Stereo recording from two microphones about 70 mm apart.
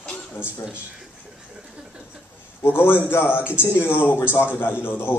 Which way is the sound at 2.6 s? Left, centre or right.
Left.